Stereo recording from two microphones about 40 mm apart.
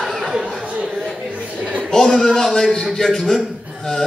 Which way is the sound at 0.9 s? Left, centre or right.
Centre.